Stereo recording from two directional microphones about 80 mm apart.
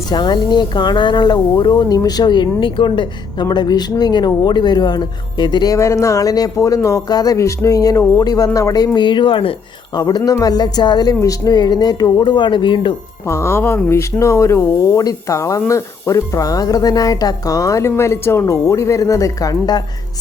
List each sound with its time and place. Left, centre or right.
0.1 s speech: left
3.5 s speech: left
5.7 s speech: left
7.1 s speech: left
7.3 s speech: left
8.2 s speech: left
9.9 s speech: left
11.1 s speech: left
12.2 s speech: left
13.2 s speech: left